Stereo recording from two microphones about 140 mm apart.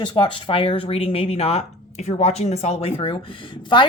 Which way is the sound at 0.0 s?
35° left (ahead or behind).